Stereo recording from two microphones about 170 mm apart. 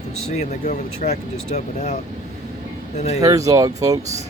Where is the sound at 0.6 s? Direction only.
55° left (ahead or behind).